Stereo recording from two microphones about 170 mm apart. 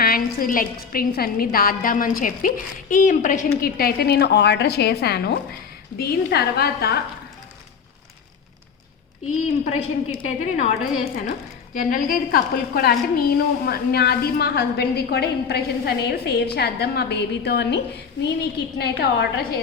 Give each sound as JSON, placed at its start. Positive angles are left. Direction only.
{"t": 0.0, "sound": "a woman's voice", "side_deg": 60}
{"t": 9.6, "sound": "a woman's voice", "side_deg": 40}
{"t": 11.7, "sound": "a woman's voice", "side_deg": 55}